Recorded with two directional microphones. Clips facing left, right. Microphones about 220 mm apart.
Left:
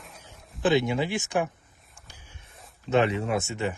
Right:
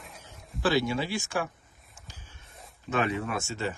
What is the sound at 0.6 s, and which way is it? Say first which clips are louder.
Speech: left 3 dB; 20° left (ahead or behind).